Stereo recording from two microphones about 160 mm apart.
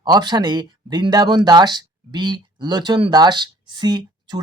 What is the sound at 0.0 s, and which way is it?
Speech, 25° right (ahead or behind).